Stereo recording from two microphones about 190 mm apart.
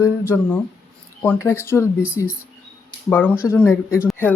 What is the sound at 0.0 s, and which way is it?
Speech, 15° left (ahead or behind).